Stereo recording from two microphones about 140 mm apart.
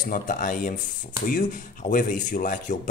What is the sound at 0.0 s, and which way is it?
Speech, 80° left.